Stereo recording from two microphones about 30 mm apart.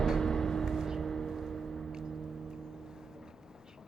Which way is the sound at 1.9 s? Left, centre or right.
Centre.